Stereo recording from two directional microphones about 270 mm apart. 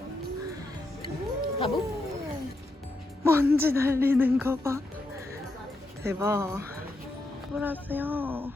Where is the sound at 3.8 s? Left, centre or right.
Centre.